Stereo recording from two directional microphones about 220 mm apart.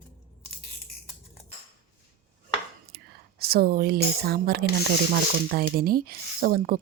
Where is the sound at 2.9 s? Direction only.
45° right (ahead or behind).